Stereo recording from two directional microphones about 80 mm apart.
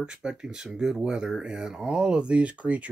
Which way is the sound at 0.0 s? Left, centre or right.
Centre.